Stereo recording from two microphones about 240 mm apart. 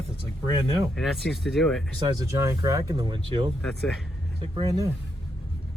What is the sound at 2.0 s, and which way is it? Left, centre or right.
Speech, centre.